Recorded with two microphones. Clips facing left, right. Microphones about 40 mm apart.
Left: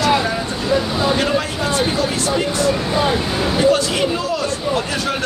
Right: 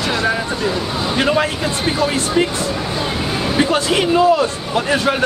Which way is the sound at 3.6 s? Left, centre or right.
Right.